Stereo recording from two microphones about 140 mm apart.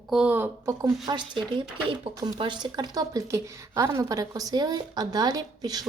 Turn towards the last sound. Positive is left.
turn(degrees=-30)  # may be behind; listen again after turning